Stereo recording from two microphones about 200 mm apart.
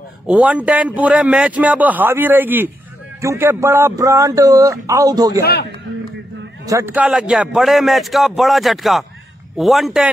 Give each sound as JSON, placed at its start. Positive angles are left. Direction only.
{"t": 0.3, "sound": "a man's voice", "side_deg": -5}
{"t": 5.4, "sound": "a man's voice", "side_deg": 55}
{"t": 6.6, "sound": "a man's voice", "side_deg": -15}